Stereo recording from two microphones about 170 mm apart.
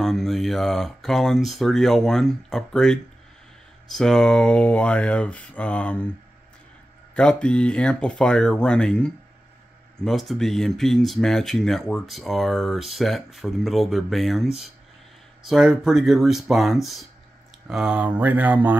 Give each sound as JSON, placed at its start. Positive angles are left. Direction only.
{"t": 0.0, "sound": "speech", "side_deg": 0}
{"t": 7.2, "sound": "speech", "side_deg": 5}